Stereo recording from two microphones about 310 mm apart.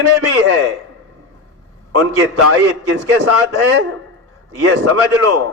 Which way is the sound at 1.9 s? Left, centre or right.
Right.